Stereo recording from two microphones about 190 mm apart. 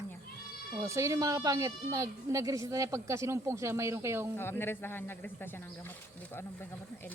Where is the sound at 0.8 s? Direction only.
15° right (ahead or behind).